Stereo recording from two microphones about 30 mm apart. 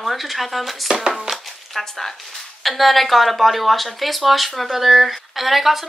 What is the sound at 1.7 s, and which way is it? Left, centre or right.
Speech, centre.